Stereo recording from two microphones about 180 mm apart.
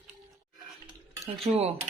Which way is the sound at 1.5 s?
40° right (ahead or behind).